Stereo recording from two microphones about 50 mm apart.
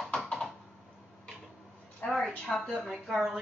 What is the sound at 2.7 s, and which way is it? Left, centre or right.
Speech, centre.